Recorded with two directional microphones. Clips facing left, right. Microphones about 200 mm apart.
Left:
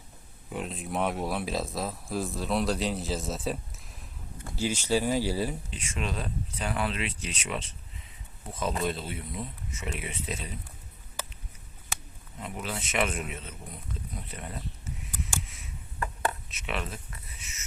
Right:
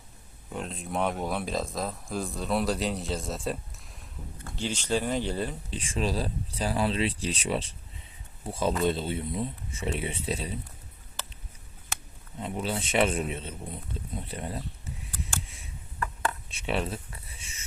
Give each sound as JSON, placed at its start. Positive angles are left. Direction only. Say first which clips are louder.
{"t": 0.5, "sound": "speech", "louder": "even", "side_deg": 0}
{"t": 5.7, "sound": "speech", "louder": "right 5 dB", "side_deg": -30}
{"t": 12.4, "sound": "speech", "louder": "right 5 dB", "side_deg": -30}
{"t": 14.2, "sound": "camera", "louder": "right 8 dB", "side_deg": -30}
{"t": 15.4, "sound": "a sound", "louder": "left 1 dB", "side_deg": -30}